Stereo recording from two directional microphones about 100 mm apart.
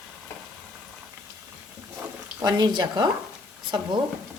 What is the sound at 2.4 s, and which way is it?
Speech, 40° right (ahead or behind).